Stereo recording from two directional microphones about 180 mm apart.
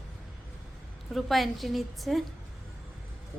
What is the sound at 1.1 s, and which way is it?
A woman's voice, centre (ahead or behind).